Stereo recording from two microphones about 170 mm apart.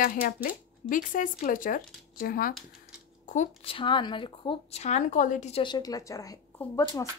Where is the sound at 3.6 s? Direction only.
30° left (ahead or behind); by 5.6 s 45° left (ahead or behind).